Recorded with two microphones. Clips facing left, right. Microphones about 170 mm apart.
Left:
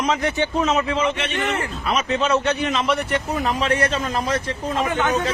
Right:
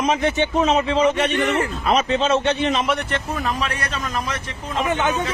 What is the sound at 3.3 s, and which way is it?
A man's voice, 25° left (ahead or behind).